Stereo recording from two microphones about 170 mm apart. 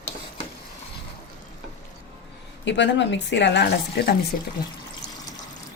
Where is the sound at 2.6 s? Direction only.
90° left.